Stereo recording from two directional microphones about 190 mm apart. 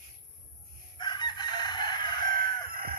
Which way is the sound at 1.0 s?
20° left (ahead or behind).